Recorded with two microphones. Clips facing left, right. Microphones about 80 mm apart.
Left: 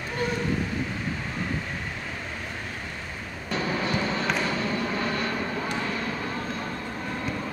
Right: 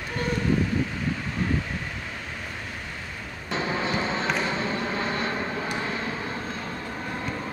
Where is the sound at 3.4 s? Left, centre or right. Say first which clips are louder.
Even; right.